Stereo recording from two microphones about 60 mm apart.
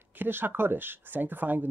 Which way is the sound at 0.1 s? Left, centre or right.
Right.